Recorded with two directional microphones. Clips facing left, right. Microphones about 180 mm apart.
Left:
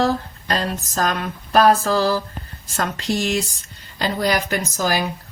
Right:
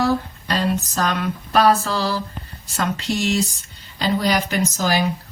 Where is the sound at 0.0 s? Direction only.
45° left (ahead or behind).